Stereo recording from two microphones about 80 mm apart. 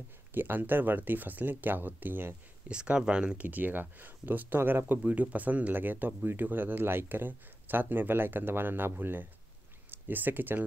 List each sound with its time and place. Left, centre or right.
0.3 s speech: right
2.7 s speech: centre